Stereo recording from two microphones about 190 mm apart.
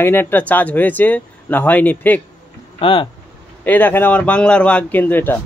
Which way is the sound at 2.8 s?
25° left (ahead or behind).